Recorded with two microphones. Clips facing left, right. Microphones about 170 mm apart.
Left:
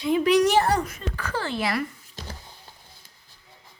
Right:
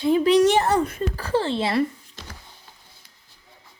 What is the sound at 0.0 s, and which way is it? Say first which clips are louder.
Speech: right 3 dB; 30° right (ahead or behind).